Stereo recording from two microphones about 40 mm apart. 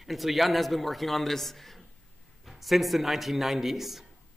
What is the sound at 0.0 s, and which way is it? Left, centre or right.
Speech, centre.